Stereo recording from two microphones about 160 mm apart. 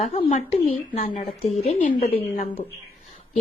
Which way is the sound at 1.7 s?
50° left (ahead or behind).